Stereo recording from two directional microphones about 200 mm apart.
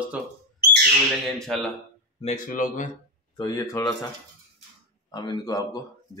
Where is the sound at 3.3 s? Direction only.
20° left (ahead or behind).